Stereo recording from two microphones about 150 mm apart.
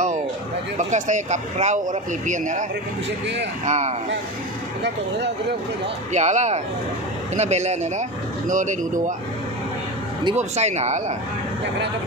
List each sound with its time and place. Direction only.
0.7 s speech: 55° right (ahead or behind)
3.6 s speech: 50° right (ahead or behind)
6.1 s speech: 50° right (ahead or behind)
10.3 s speech: 50° right (ahead or behind)